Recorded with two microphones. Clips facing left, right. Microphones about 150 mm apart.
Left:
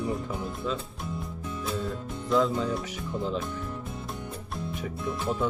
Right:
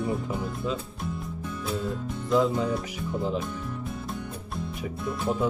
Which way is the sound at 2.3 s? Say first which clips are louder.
Right 1 dB; 5° right (ahead or behind).